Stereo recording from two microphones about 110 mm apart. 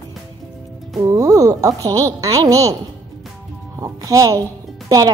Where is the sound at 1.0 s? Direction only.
30° right (ahead or behind).